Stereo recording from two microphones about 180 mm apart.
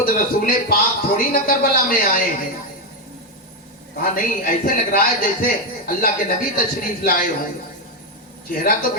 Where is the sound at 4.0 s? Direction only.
50° left (ahead or behind).